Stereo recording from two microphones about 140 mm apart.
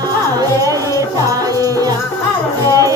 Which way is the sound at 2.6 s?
25° right (ahead or behind).